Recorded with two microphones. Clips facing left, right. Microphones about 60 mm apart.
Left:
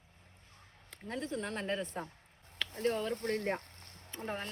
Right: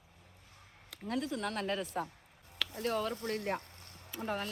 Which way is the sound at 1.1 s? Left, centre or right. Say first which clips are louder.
Right 2 dB; left.